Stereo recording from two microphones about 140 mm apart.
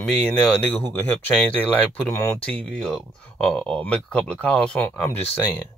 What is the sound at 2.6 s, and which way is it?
Speech, 5° left (ahead or behind).